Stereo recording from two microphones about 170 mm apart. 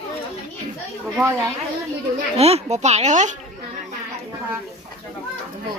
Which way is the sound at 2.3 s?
40° right (ahead or behind).